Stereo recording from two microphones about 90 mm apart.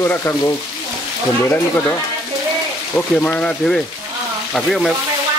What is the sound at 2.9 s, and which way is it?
Speech, 20° left (ahead or behind).